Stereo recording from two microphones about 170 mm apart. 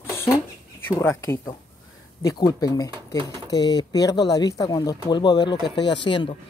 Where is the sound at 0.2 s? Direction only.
15° left (ahead or behind).